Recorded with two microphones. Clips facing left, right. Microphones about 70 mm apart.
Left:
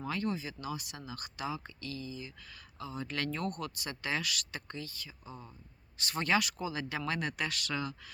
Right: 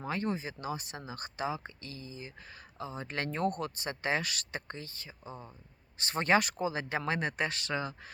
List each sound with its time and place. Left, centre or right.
0.0 s speech: right